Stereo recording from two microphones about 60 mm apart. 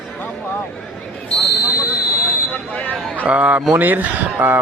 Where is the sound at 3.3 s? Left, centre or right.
Right.